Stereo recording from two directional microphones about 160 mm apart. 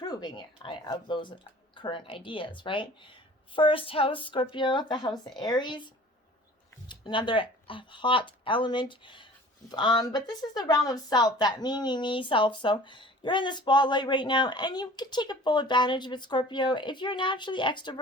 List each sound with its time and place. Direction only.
0.0 s speech: 25° left (ahead or behind)